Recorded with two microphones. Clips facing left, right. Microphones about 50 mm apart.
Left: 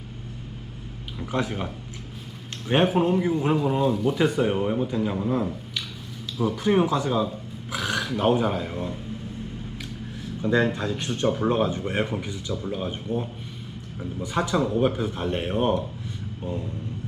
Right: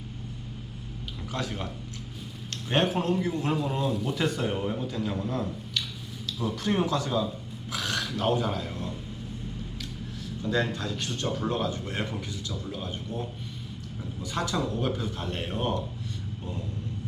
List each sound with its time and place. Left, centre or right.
1.2 s speech: left; by 4.3 s centre
4.3 s speech: centre
10.2 s speech: left